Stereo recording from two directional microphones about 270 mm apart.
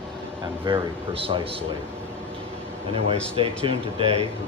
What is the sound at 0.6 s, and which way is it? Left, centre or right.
Speech, centre.